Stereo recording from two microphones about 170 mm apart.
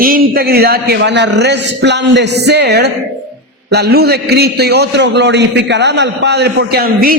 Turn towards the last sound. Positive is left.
turn(degrees=-60)  # may be behind; listen again after turning